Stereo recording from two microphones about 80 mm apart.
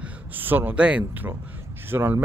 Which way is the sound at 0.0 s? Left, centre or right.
Right.